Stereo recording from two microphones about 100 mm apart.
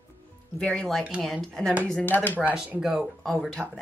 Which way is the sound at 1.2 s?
Centre (ahead or behind).